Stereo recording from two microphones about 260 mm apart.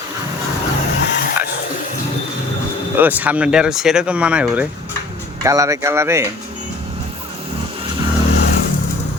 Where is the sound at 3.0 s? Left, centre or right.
Centre.